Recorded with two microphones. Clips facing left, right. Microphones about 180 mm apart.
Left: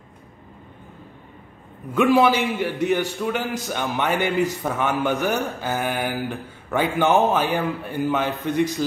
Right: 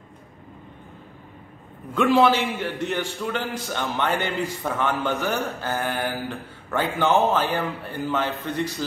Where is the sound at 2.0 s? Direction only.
10° left (ahead or behind).